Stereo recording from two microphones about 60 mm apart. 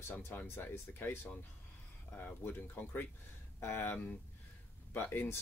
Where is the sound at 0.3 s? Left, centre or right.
Left.